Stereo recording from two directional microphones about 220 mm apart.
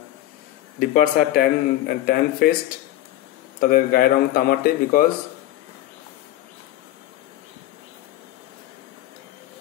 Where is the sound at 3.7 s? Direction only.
40° left (ahead or behind).